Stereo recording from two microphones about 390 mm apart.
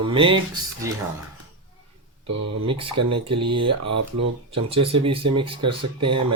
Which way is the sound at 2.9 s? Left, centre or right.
Right.